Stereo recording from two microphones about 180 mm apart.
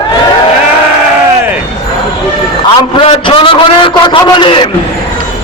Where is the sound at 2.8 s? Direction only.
25° left (ahead or behind).